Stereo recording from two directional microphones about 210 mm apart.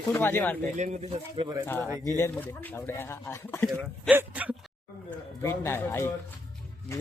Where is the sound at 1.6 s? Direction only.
10° left (ahead or behind).